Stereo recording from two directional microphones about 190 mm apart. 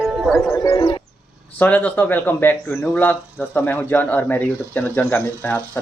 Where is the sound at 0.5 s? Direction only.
15° left (ahead or behind).